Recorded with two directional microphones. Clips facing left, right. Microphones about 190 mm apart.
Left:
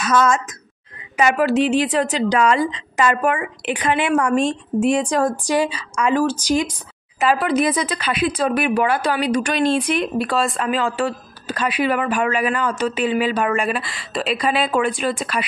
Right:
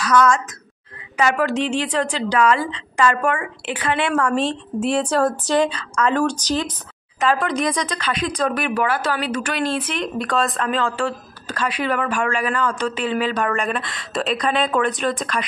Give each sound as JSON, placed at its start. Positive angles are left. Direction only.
{"t": 0.0, "sound": "a woman's voice", "side_deg": 25}